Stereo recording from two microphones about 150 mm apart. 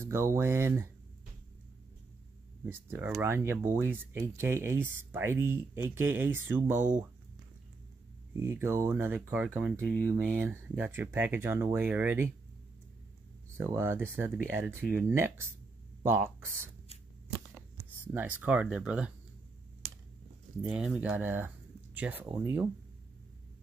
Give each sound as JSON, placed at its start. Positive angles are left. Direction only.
{"t": 0.0, "sound": "speech", "side_deg": -20}
{"t": 2.6, "sound": "speech", "side_deg": -15}
{"t": 8.4, "sound": "speech", "side_deg": -15}
{"t": 13.6, "sound": "speech", "side_deg": -15}
{"t": 18.0, "sound": "speech", "side_deg": -10}
{"t": 20.6, "sound": "speech", "side_deg": -5}